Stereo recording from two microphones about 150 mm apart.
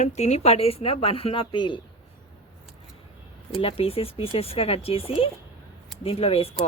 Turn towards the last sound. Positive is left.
turn(degrees=40)  # may be behind; listen again after turning